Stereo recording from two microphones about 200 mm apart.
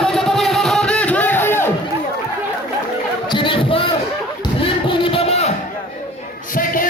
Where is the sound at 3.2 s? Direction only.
25° left (ahead or behind).